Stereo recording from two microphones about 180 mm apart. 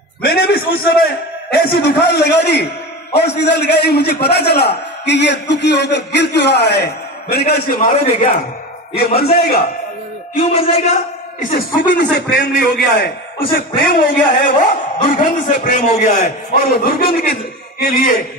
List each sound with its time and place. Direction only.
0.3 s a man's voice: 60° left (ahead or behind)
10.3 s a man's voice: 35° left (ahead or behind)
11.5 s a man's voice: 50° left (ahead or behind)
11.9 s a man's voice: 70° left (ahead or behind); by 16.9 s 45° left (ahead or behind)
17.7 s a man's voice: 60° left (ahead or behind)